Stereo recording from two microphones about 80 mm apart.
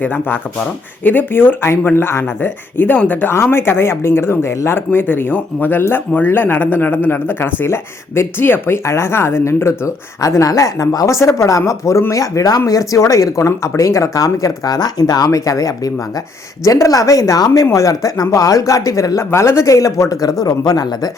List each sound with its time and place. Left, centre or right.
0.0 s speech: left
3.3 s speech: left
10.2 s speech: left